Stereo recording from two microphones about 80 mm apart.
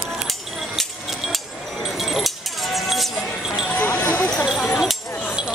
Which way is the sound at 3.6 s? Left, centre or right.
Centre.